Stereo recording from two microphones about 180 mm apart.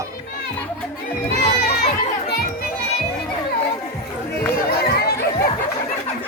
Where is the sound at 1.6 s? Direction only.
65° left (ahead or behind).